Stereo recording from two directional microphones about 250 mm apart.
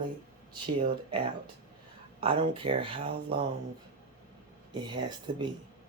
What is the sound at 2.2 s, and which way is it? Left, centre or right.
Speech, right.